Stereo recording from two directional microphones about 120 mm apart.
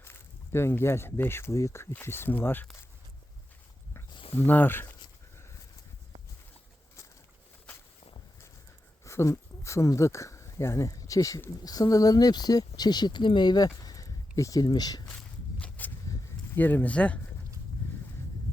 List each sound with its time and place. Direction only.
0.0 s speech: 20° left (ahead or behind)
4.1 s a sound: 50° left (ahead or behind)
4.4 s speech: 15° left (ahead or behind)
9.0 s speech: 25° left (ahead or behind)
15.0 s walk: 10° left (ahead or behind)
16.6 s speech: 15° left (ahead or behind)